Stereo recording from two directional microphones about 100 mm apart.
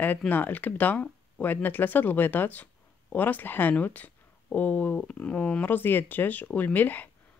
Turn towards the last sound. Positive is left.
turn(degrees=20)  # may be behind; listen again after turning